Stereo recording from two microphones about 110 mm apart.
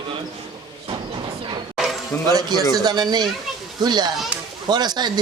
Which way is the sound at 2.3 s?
40° right (ahead or behind).